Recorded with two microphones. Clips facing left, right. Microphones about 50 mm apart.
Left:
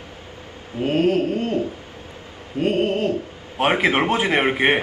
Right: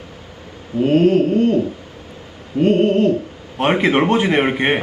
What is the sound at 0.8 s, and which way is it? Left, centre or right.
Pigeon, centre.